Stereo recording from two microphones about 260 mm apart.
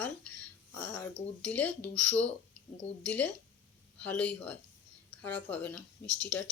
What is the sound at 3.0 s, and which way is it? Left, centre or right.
Speech, centre.